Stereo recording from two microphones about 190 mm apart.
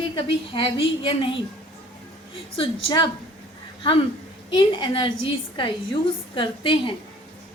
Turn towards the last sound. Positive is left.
turn(degrees=25)  # may be behind; listen again after turning